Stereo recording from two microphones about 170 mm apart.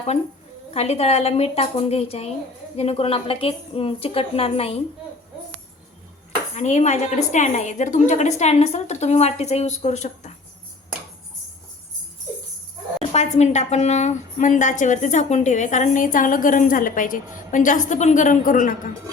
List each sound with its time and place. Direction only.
0.7 s a woman's voice: 40° left (ahead or behind)
6.6 s a woman's voice: 40° left (ahead or behind)
13.1 s a woman's voice: 40° left (ahead or behind)